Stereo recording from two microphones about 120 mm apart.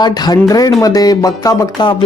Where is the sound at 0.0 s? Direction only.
35° left (ahead or behind).